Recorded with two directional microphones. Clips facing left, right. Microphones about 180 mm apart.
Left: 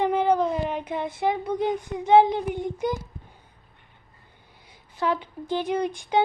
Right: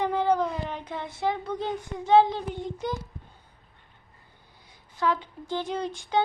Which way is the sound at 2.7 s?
15° left (ahead or behind).